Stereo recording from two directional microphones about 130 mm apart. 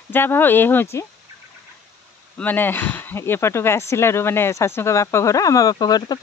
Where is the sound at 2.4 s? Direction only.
15° left (ahead or behind).